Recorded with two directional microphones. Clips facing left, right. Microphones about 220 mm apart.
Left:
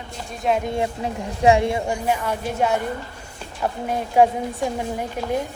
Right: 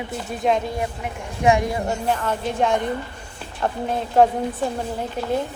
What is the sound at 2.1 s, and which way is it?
A woman's voice, 10° left (ahead or behind).